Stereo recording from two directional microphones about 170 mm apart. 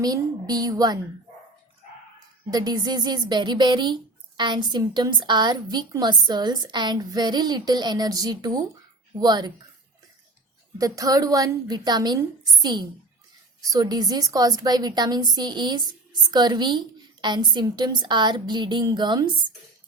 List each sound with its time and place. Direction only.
0.0 s speech: 25° right (ahead or behind)
2.5 s speech: 25° right (ahead or behind)
10.8 s speech: 20° right (ahead or behind)